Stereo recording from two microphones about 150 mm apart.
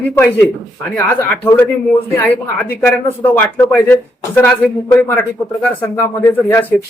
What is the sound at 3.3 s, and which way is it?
Speech, 10° left (ahead or behind).